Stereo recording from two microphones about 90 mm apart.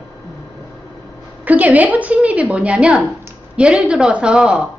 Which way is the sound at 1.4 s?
15° right (ahead or behind).